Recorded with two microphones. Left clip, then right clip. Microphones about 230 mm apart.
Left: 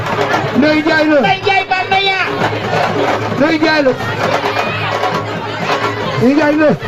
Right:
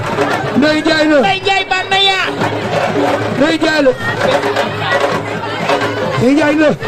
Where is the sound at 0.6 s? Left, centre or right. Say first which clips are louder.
Even; right.